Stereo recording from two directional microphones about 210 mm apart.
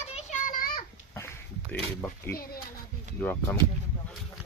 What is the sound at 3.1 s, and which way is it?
Speech, 5° left (ahead or behind).